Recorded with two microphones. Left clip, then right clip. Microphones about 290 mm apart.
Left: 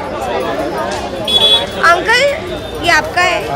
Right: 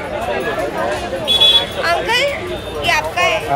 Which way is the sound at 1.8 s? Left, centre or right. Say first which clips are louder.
Left 6 dB; left.